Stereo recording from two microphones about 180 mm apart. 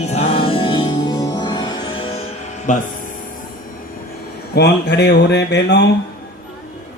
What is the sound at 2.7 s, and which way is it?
Speech, 45° left (ahead or behind).